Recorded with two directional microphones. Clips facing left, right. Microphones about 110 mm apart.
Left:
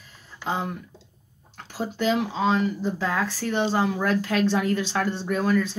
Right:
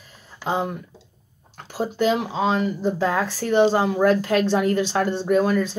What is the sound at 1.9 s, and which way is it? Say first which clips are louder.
Speech: right 2 dB; 10° right (ahead or behind).